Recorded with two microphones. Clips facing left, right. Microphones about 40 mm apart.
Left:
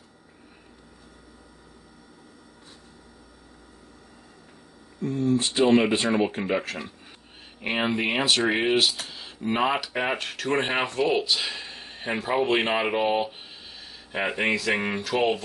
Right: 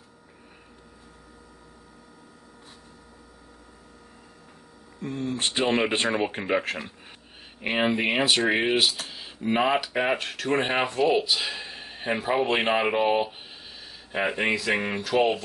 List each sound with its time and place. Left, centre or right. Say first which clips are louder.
5.0 s speech: left 5 dB; right
6.3 s speech: right 1 dB; right
7.6 s speech: right 1 dB; centre